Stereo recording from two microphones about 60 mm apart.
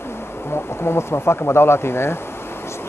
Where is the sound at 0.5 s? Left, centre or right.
Left.